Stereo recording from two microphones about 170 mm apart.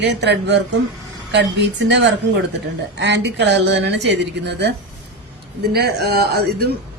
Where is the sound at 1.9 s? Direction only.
90° right.